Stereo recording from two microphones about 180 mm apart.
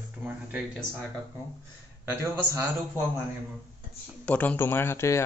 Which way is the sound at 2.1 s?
10° right (ahead or behind).